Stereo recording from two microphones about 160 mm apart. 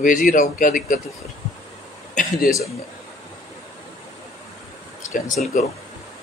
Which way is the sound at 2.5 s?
60° left (ahead or behind).